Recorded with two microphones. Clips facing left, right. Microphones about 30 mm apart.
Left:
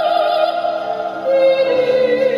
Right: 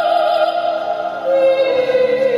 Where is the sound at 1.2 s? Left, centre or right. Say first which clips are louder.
Left 1 dB; centre.